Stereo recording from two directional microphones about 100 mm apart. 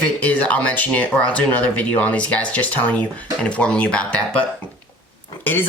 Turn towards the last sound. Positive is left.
turn(degrees=20)  # may be behind; listen again after turning